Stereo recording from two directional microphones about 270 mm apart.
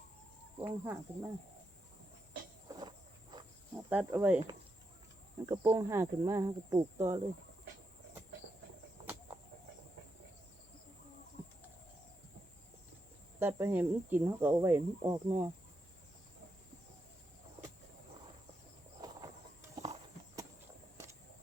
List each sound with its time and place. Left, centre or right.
0.6 s speech: centre
2.6 s a sound: centre
3.3 s cricket: centre
5.5 s speech: centre
13.4 s speech: centre
19.7 s horse: right